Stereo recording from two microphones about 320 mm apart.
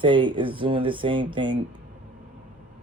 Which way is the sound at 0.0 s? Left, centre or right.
Centre.